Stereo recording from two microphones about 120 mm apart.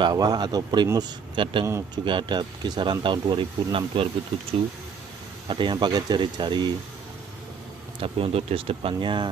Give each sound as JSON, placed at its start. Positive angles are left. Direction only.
{"t": 0.0, "sound": "speech", "side_deg": -35}
{"t": 8.0, "sound": "speech", "side_deg": -55}